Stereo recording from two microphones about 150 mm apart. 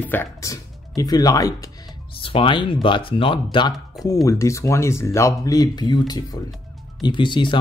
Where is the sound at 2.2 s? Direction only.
35° left (ahead or behind).